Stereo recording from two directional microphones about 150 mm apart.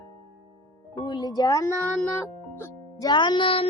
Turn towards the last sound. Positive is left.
turn(degrees=35)  # may be behind; listen again after turning